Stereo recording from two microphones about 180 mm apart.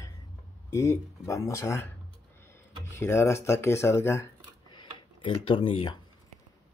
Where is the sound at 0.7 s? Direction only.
15° left (ahead or behind).